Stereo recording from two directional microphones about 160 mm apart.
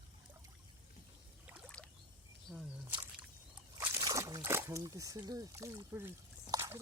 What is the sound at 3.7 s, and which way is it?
Slosh, 25° right (ahead or behind).